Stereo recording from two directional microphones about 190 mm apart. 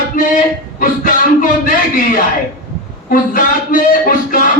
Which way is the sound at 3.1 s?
45° left (ahead or behind).